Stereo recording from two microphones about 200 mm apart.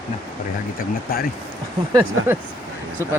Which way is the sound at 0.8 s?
50° left (ahead or behind).